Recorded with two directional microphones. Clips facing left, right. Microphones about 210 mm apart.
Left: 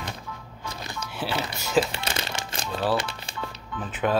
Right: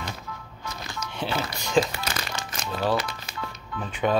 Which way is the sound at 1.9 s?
25° left (ahead or behind).